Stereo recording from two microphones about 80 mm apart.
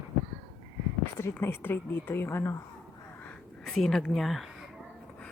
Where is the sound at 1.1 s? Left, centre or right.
Left.